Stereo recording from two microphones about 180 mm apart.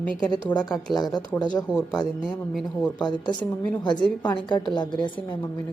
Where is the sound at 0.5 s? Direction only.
25° left (ahead or behind).